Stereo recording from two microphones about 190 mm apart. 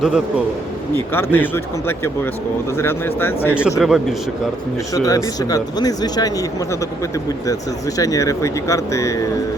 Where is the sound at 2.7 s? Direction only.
10° left (ahead or behind).